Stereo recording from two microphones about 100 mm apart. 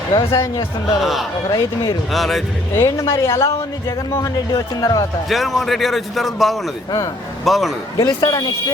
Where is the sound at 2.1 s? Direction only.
Centre (ahead or behind).